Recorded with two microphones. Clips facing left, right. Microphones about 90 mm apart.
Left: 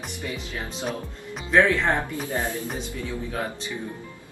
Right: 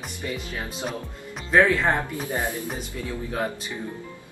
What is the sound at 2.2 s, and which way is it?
Speech, 15° right (ahead or behind).